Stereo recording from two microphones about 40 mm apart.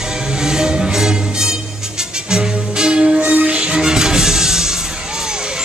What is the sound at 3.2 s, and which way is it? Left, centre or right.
Music, right.